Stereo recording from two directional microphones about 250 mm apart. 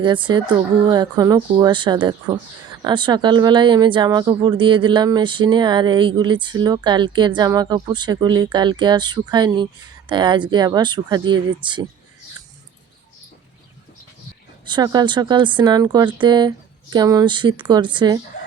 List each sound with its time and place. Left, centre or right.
0.0 s speech: centre
14.6 s speech: centre